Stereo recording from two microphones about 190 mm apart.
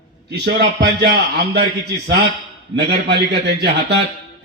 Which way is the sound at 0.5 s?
60° right (ahead or behind).